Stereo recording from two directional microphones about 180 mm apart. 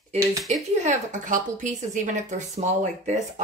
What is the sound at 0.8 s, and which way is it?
A woman's voice, 45° right (ahead or behind).